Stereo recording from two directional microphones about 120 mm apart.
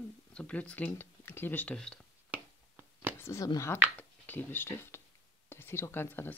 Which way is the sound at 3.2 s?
25° left (ahead or behind).